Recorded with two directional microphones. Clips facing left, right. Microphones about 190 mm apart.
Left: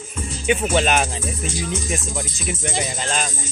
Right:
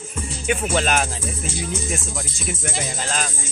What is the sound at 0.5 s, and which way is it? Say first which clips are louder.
Speech: left 3 dB; centre (ahead or behind).